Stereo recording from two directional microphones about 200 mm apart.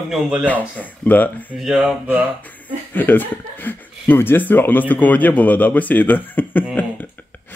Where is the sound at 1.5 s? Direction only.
Centre (ahead or behind).